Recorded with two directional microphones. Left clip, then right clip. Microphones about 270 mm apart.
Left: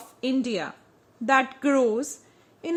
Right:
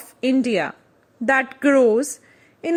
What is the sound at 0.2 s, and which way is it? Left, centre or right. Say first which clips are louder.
A woman's voice: right 7 dB; centre.